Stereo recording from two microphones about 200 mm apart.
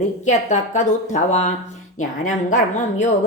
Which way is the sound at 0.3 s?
40° left (ahead or behind).